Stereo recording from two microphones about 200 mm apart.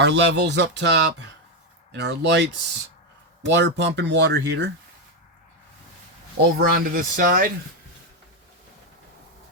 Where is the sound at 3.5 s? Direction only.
60° right (ahead or behind).